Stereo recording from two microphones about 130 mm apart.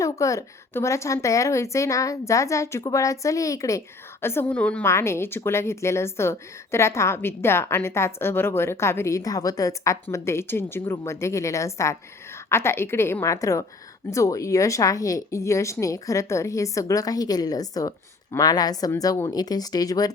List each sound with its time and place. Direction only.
0.0 s speech: 25° left (ahead or behind)